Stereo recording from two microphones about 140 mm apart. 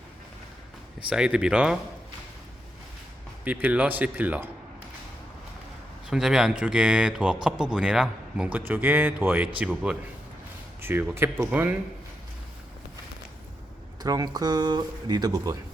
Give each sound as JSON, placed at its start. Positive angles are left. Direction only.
{"t": 0.9, "sound": "speech", "side_deg": -5}
{"t": 3.4, "sound": "a man's voice", "side_deg": -10}
{"t": 6.1, "sound": "a man's voice", "side_deg": -5}
{"t": 14.0, "sound": "speech", "side_deg": -25}